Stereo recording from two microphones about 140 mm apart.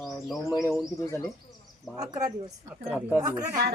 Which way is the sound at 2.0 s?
25° right (ahead or behind).